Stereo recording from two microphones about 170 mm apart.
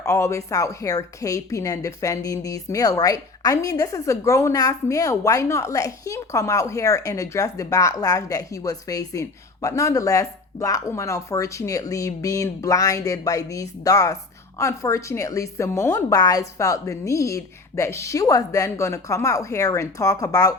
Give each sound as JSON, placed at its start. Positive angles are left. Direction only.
{"t": 0.0, "sound": "a woman's voice", "side_deg": 15}